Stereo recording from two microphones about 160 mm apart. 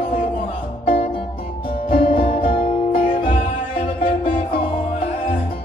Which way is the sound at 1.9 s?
35° left (ahead or behind).